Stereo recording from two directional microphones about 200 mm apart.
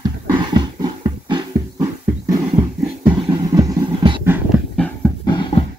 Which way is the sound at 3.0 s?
25° right (ahead or behind).